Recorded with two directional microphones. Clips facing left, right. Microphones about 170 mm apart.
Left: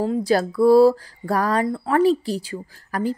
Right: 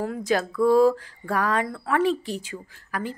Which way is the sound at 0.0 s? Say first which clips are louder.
Left 5 dB; 30° left (ahead or behind).